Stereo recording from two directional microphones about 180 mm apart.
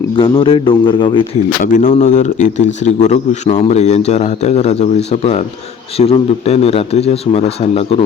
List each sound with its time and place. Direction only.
0.2 s a man's voice: 30° left (ahead or behind)
1.6 s a man's voice: 45° left (ahead or behind)